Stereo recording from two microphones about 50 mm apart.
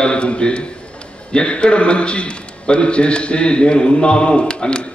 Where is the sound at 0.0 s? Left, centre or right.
Left.